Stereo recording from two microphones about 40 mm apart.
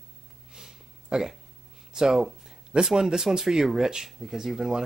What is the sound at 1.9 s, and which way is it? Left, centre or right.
Speech, centre.